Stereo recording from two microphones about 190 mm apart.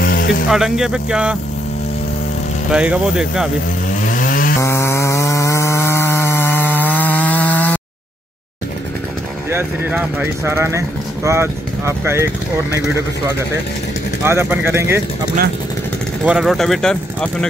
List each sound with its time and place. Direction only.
0.0 s music: 50° left (ahead or behind)
0.5 s speech: centre (ahead or behind)
2.7 s speech: 5° right (ahead or behind)
3.9 s chainsaw: 45° left (ahead or behind)
4.6 s chainsaw: 15° left (ahead or behind)
9.5 s speech: 10° right (ahead or behind)
14.2 s speech: 10° right (ahead or behind)
16.3 s speech: centre (ahead or behind)